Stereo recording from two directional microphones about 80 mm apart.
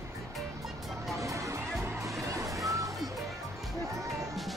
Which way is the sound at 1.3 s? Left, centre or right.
Right.